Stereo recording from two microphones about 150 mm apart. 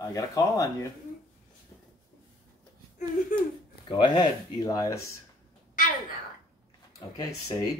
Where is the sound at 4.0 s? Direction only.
30° left (ahead or behind).